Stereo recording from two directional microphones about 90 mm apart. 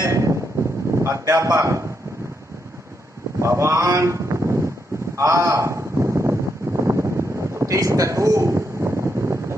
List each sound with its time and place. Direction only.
0.0 s wind noise: 35° right (ahead or behind)
0.9 s speech: 35° right (ahead or behind)
3.3 s a man's voice: 30° right (ahead or behind)
5.1 s a sound: 35° right (ahead or behind)